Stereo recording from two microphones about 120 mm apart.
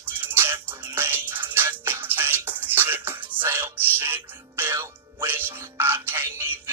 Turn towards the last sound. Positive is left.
turn(degrees=-25)  # may be behind; listen again after turning